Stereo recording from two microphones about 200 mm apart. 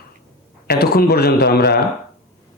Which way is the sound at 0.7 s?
50° left (ahead or behind).